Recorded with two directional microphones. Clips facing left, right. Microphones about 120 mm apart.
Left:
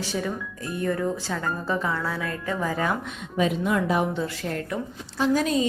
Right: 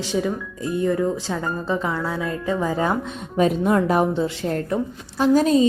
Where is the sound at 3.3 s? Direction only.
40° right (ahead or behind).